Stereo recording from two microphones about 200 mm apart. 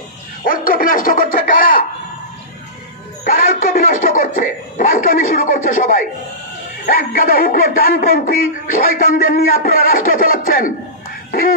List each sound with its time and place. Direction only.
0.5 s bow-wow: 45° left (ahead or behind)
3.3 s chuckle: 40° left (ahead or behind)
6.9 s speech: 45° left (ahead or behind)